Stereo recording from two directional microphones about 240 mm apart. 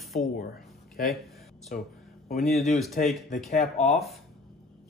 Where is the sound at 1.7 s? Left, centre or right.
Left.